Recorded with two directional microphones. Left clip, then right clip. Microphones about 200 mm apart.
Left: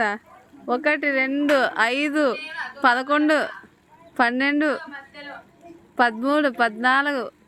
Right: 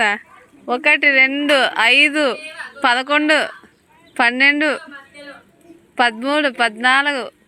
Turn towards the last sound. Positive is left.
turn(degrees=10)  # may be behind; listen again after turning